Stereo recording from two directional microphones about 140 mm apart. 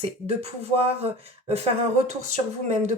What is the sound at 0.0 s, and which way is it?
Speech, 50° right (ahead or behind).